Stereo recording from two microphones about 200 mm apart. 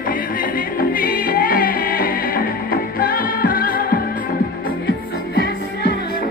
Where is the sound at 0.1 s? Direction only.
45° left (ahead or behind).